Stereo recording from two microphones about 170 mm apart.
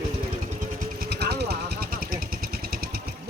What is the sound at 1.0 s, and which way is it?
Vehicle, 70° right (ahead or behind).